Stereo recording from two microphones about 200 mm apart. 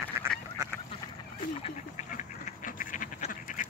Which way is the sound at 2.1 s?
40° left (ahead or behind).